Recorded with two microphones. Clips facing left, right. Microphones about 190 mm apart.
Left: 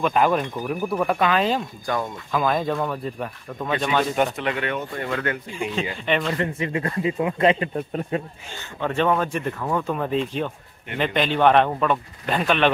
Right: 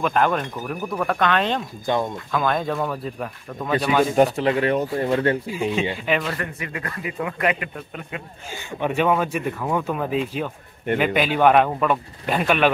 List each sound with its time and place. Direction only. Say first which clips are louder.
0.0 s speech: left 1 dB; 5° left (ahead or behind)
4.1 s speech: right 5 dB; 35° right (ahead or behind)
5.5 s speech: right 4 dB; 5° right (ahead or behind)
6.3 s speech: left 5 dB; 25° left (ahead or behind)
8.5 s speech: right 2 dB; 15° right (ahead or behind)